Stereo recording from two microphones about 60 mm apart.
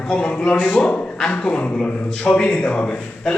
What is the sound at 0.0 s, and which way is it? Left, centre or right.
Speech, centre.